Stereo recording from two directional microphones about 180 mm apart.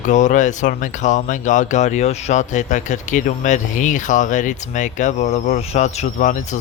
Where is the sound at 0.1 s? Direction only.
45° left (ahead or behind).